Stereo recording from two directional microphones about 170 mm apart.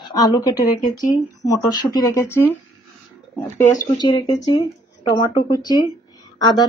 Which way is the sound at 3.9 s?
25° left (ahead or behind).